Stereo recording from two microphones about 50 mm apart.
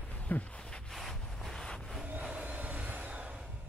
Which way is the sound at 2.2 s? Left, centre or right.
Centre.